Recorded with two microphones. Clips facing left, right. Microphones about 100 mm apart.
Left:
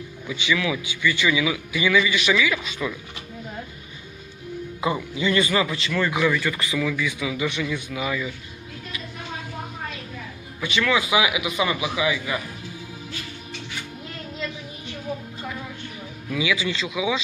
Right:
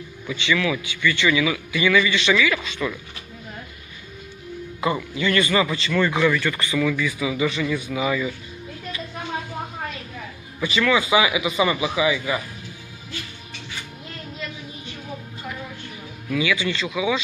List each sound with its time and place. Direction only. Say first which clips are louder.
0.3 s a man's voice: right 2 dB; 10° left (ahead or behind)
4.8 s a man's voice: right 1 dB; 15° left (ahead or behind)
5.6 s speech: right 3 dB; centre (ahead or behind)
10.6 s speech: right 2 dB; centre (ahead or behind)
16.3 s a man's voice: right 2 dB; 15° left (ahead or behind)